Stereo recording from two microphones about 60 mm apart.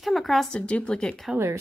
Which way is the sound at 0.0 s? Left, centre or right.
Centre.